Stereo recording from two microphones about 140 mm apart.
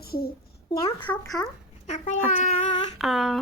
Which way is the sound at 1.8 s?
60° left (ahead or behind).